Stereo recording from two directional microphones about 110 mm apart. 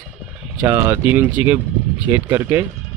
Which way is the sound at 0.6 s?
25° right (ahead or behind).